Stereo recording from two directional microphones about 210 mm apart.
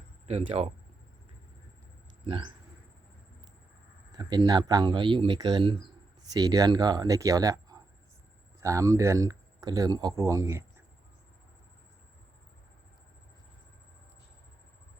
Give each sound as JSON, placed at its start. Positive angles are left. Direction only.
{"t": 0.3, "sound": "speech", "side_deg": -30}
{"t": 2.2, "sound": "speech", "side_deg": -25}
{"t": 4.1, "sound": "speech", "side_deg": -20}